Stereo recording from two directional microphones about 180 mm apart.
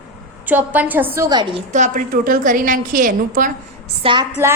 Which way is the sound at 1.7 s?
45° right (ahead or behind).